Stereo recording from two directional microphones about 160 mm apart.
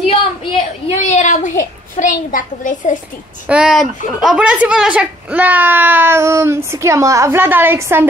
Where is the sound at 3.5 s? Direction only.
5° right (ahead or behind).